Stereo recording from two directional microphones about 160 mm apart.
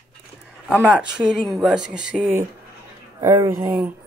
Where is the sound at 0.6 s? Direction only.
5° right (ahead or behind).